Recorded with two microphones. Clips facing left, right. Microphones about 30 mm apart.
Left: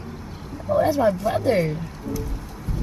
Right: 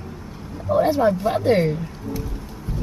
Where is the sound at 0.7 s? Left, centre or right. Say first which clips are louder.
Right 1 dB; right.